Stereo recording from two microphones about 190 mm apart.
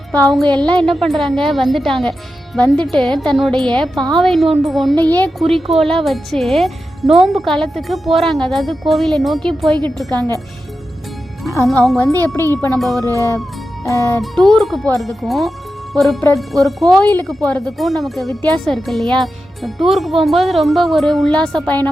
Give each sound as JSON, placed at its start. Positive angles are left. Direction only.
{"t": 0.1, "sound": "speech", "side_deg": 5}
{"t": 10.1, "sound": "speech", "side_deg": -20}
{"t": 11.6, "sound": "speech", "side_deg": 0}
{"t": 14.2, "sound": "speech", "side_deg": 0}